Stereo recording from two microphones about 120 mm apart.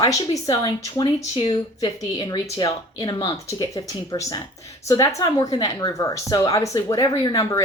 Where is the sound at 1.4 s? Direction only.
40° left (ahead or behind).